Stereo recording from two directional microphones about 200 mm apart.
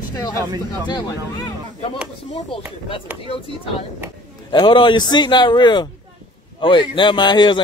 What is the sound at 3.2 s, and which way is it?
A man's voice, 25° left (ahead or behind).